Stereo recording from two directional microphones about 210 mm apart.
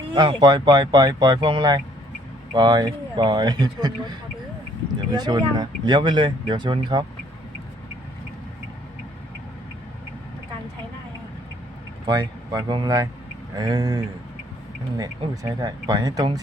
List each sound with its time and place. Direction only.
0.1 s speech: 20° right (ahead or behind)
5.1 s speech: 20° right (ahead or behind)
12.0 s speech: 20° right (ahead or behind)